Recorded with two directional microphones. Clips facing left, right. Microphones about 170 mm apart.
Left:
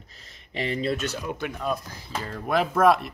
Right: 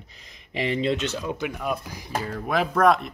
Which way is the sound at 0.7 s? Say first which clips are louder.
Right 2 dB; 20° right (ahead or behind).